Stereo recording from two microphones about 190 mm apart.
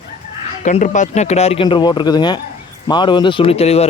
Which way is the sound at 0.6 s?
40° left (ahead or behind).